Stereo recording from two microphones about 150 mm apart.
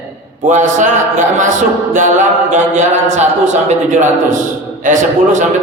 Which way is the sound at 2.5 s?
50° right (ahead or behind).